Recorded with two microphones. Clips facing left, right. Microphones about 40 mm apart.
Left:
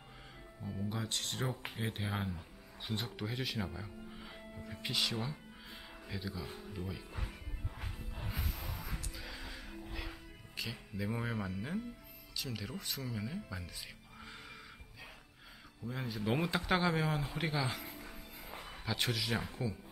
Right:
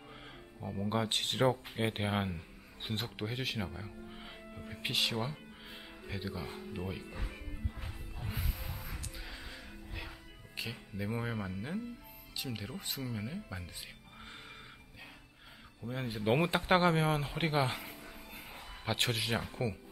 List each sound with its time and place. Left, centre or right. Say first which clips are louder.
0.6 s speech: right 3 dB; right
0.8 s speech: right 7 dB; right
3.0 s speech: right 2 dB; right
5.2 s music: right 3 dB; right
8.7 s music: left 1 dB; centre
10.5 s speech: right 1 dB; centre
15.9 s speech: right 4 dB; right